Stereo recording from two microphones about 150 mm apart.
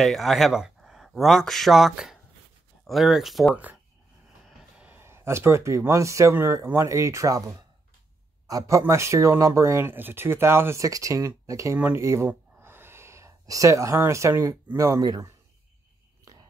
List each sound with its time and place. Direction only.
0.0 s speech: centre (ahead or behind); by 15.3 s 25° right (ahead or behind)